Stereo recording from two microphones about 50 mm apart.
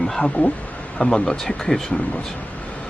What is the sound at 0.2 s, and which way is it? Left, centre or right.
Speech, left.